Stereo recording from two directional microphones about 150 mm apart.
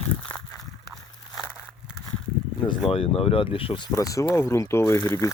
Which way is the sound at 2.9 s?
40° left (ahead or behind).